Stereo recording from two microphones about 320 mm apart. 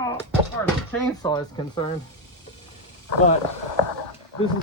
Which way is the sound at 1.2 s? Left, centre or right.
Centre.